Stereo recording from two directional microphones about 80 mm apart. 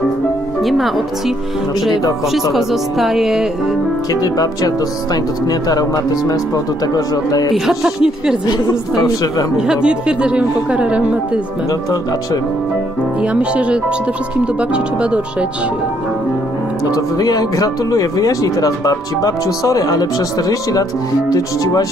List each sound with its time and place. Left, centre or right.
0.7 s speech: centre
2.5 s speech: centre
4.1 s speech: left
7.5 s speech: centre
8.5 s a woman's voice: left
9.6 s a woman's voice: centre
13.2 s a woman's voice: centre
16.9 s speech: left